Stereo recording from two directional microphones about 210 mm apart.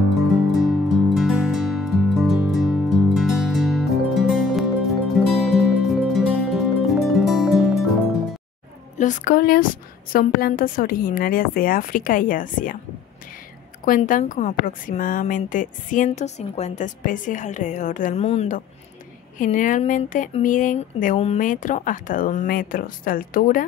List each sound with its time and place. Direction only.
0.5 s music: centre (ahead or behind)
8.9 s a woman's voice: 35° left (ahead or behind)
13.8 s a woman's voice: 40° left (ahead or behind)